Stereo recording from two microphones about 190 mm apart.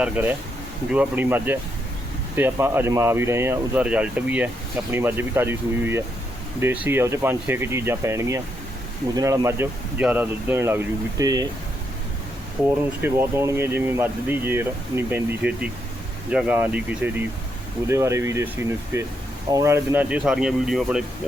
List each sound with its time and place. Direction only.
0.0 s speech: 10° right (ahead or behind)
12.6 s speech: 10° right (ahead or behind)